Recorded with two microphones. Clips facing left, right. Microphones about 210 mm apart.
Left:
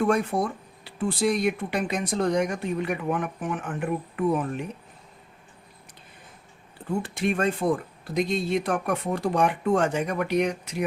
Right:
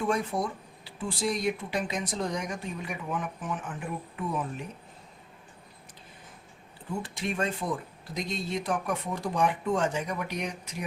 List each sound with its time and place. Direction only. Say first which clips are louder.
0.0 s speech: left 5 dB; 60° left (ahead or behind)
7.0 s speech: left 6 dB; 60° left (ahead or behind)